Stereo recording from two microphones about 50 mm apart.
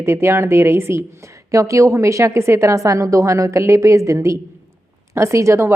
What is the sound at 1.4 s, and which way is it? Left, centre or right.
A woman's voice, right.